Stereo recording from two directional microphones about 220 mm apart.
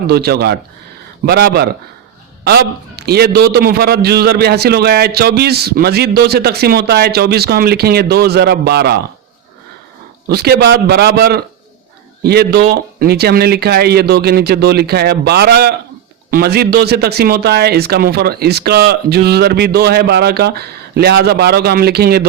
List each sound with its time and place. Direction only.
0.1 s a man's voice: 45° right (ahead or behind)
10.2 s a man's voice: 45° right (ahead or behind)